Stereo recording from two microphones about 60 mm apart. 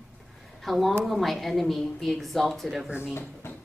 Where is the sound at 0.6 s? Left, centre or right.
Centre.